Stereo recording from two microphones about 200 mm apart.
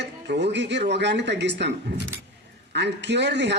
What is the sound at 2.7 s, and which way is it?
Speech, 60° right (ahead or behind).